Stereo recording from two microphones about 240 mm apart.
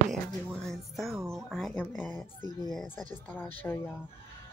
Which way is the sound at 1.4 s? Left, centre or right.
Centre.